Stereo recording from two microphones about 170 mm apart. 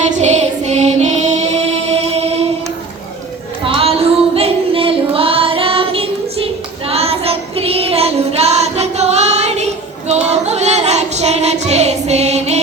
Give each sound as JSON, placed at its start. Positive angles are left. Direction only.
{"t": 0.1, "sound": "music", "side_deg": -40}
{"t": 3.7, "sound": "child singing", "side_deg": -35}